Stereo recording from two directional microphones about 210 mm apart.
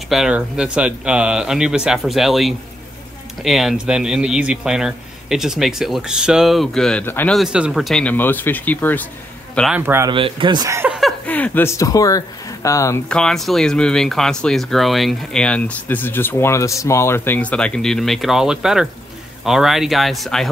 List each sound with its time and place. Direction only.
0.1 s speech: 5° right (ahead or behind)
9.6 s a man's voice: 5° right (ahead or behind)
10.1 s speech: 25° right (ahead or behind)
11.0 s speech: 5° left (ahead or behind)